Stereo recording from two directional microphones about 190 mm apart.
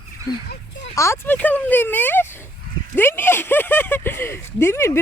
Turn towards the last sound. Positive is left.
turn(degrees=15)  # may be behind; listen again after turning